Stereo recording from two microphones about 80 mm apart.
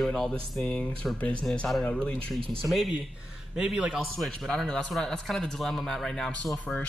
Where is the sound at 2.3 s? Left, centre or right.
Centre.